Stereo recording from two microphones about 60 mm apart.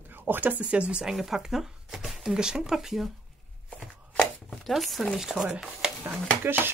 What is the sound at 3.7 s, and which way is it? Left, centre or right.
Chopping, centre.